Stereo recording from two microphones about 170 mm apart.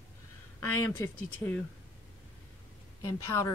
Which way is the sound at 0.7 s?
10° left (ahead or behind).